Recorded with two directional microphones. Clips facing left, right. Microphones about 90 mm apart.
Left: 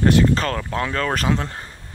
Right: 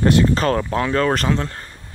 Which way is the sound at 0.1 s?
5° right (ahead or behind).